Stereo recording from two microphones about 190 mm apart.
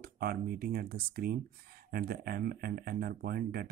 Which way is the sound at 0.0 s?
50° right (ahead or behind).